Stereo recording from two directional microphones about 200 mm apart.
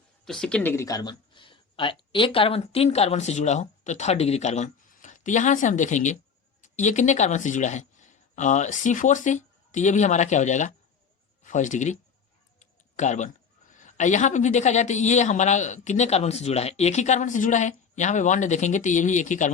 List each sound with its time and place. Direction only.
0.3 s speech: centre (ahead or behind); by 19.5 s 40° left (ahead or behind)